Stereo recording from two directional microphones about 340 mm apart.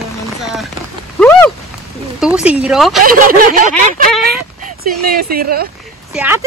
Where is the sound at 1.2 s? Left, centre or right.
Centre.